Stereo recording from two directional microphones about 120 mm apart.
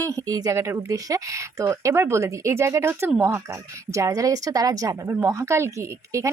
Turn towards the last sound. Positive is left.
turn(degrees=-25)  # may be behind; listen again after turning